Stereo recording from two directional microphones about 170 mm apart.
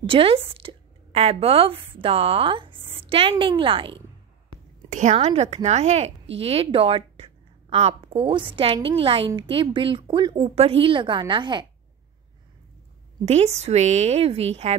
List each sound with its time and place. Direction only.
0.0 s a woman's voice: 30° right (ahead or behind)
4.8 s a woman's voice: 45° right (ahead or behind); by 11.6 s 30° right (ahead or behind)
13.2 s a woman's voice: 40° right (ahead or behind)